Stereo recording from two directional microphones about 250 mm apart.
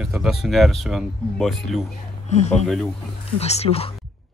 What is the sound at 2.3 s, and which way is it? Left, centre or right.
Speech, left.